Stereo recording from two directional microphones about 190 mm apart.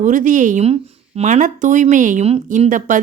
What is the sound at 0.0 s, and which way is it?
A woman's voice, 40° right (ahead or behind).